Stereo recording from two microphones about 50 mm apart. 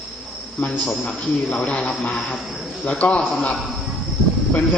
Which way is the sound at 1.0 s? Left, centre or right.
Left.